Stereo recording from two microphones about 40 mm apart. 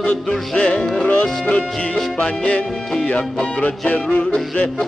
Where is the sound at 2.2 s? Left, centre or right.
Left.